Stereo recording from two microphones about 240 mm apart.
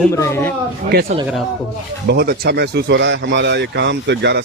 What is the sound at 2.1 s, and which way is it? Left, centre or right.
Speech, right.